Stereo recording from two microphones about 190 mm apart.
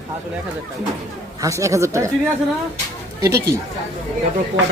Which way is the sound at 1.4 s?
15° right (ahead or behind).